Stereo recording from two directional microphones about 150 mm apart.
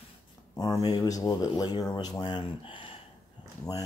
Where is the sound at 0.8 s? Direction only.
25° left (ahead or behind).